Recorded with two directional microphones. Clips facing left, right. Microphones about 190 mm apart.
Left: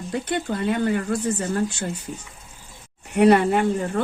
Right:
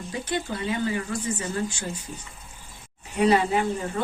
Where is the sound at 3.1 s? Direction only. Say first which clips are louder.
Left 5 dB; 60° left (ahead or behind).